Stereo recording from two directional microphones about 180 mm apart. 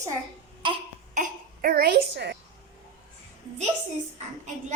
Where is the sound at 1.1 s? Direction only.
55° right (ahead or behind).